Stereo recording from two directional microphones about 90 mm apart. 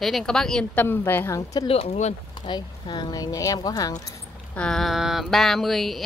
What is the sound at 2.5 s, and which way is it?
Speech, 55° left (ahead or behind).